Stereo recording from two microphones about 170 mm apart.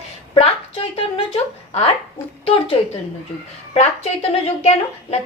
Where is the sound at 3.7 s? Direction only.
35° left (ahead or behind).